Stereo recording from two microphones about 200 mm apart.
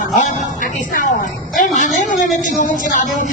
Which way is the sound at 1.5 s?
40° left (ahead or behind).